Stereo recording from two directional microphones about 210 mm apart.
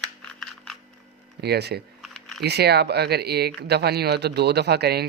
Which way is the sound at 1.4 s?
50° right (ahead or behind).